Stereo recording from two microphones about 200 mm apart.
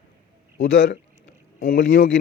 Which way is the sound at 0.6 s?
70° left (ahead or behind).